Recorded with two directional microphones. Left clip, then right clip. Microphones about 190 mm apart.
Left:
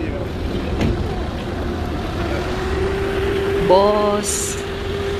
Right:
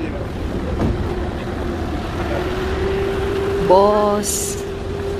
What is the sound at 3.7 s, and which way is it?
Speech, 15° right (ahead or behind).